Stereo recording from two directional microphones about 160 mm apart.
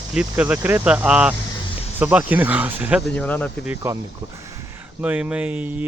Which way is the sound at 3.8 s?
15° right (ahead or behind).